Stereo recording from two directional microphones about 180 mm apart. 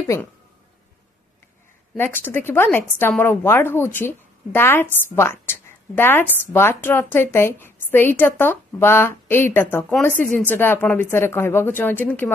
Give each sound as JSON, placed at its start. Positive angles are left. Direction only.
{"t": 0.0, "sound": "speech", "side_deg": 15}
{"t": 2.0, "sound": "a woman's voice", "side_deg": 10}